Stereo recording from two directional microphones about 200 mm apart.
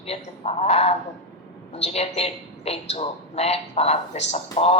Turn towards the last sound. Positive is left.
turn(degrees=30)  # may be behind; listen again after turning